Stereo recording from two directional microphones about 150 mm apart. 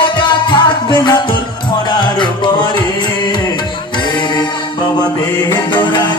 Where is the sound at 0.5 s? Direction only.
30° left (ahead or behind).